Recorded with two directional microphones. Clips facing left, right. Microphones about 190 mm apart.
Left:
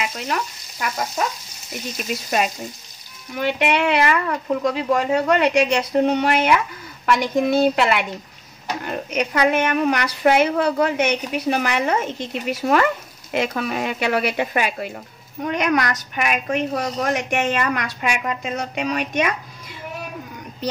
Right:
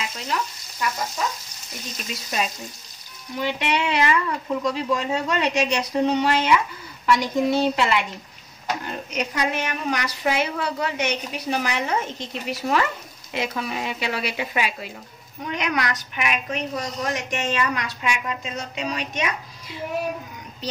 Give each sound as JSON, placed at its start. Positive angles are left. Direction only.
{"t": 0.0, "sound": "frying", "side_deg": 65}
{"t": 3.3, "sound": "a woman's voice", "side_deg": 60}
{"t": 9.1, "sound": "a woman's voice", "side_deg": 60}